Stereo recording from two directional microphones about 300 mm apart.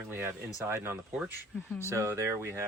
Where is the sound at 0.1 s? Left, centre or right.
Centre.